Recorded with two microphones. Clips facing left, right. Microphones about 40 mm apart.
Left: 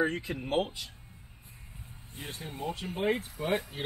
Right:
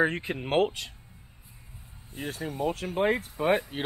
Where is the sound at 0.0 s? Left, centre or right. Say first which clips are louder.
Right 4 dB; right.